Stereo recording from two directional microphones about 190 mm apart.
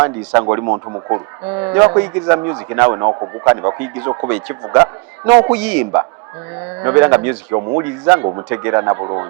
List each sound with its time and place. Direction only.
0.3 s a man's voice: 20° right (ahead or behind)
5.5 s a man's voice: 5° right (ahead or behind)